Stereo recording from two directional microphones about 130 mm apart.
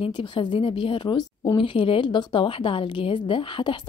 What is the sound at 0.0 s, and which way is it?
A woman's voice, 40° left (ahead or behind).